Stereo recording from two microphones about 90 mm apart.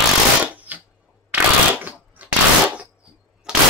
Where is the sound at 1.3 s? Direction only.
20° right (ahead or behind).